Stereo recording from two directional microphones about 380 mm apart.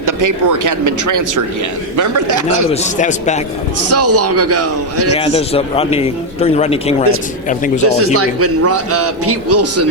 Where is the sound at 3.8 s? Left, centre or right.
Right.